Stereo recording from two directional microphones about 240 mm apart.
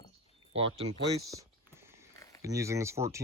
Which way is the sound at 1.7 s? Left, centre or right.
Centre.